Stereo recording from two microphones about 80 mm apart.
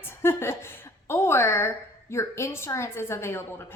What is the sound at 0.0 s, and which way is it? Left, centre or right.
A woman's voice, left.